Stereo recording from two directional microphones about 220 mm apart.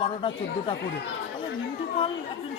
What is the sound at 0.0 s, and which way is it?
Speech, 25° left (ahead or behind).